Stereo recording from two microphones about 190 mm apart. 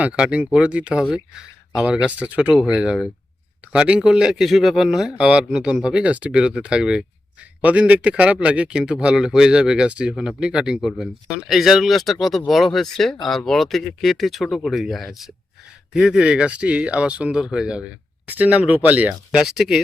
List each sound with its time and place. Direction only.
0.0 s speech: 5° right (ahead or behind)